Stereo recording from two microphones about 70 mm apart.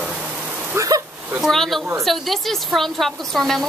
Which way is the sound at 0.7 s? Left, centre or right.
Right.